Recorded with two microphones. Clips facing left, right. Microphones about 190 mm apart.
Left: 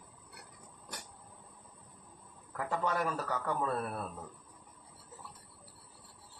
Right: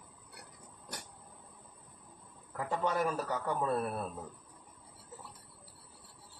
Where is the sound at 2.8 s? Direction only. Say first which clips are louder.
Right 3 dB; 20° right (ahead or behind).